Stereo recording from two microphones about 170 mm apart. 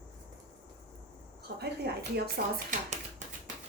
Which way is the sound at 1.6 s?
70° right (ahead or behind).